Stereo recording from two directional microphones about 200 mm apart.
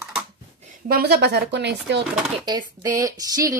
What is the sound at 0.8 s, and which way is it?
Speech, 50° right (ahead or behind).